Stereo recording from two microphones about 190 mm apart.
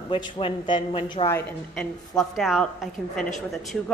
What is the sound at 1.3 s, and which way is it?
A woman's voice, 5° left (ahead or behind).